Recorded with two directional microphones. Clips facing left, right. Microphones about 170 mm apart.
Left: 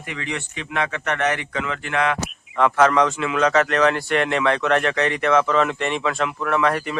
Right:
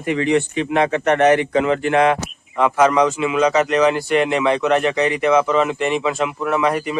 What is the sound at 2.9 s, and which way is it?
Speech, centre (ahead or behind).